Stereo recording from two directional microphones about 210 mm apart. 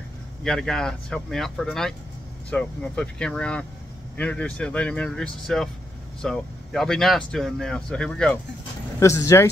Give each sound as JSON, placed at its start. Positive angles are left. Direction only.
{"t": 0.4, "sound": "speech", "side_deg": 5}